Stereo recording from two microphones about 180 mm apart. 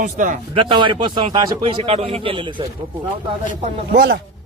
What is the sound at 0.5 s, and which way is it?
A man's voice, 25° right (ahead or behind).